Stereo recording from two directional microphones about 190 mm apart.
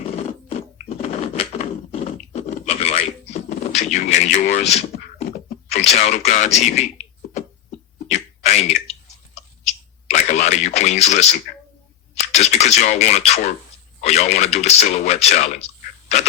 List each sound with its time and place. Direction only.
0.4 s a sound: 30° left (ahead or behind)
3.7 s speech: 35° left (ahead or behind)
8.1 s clicking: 35° left (ahead or behind)
12.1 s speech: 35° left (ahead or behind)